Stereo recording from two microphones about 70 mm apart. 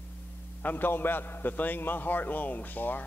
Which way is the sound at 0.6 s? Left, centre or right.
Left.